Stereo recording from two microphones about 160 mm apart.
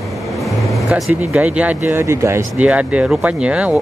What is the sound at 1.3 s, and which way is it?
Speech, 5° right (ahead or behind).